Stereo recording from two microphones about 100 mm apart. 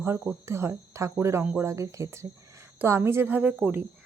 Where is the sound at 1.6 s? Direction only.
30° right (ahead or behind).